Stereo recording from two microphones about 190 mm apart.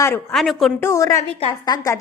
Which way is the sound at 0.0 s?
10° left (ahead or behind).